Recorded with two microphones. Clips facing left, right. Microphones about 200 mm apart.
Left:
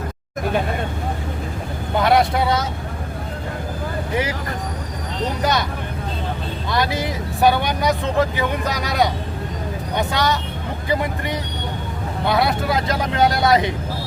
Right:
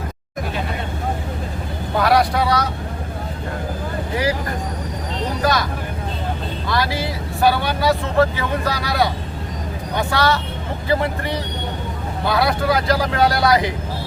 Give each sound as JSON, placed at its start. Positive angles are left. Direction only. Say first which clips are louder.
{"t": 2.0, "sound": "speech", "louder": "even", "side_deg": 25}
{"t": 5.4, "sound": "vehicle", "louder": "right 2 dB", "side_deg": 20}
{"t": 6.7, "sound": "speech", "louder": "even", "side_deg": 20}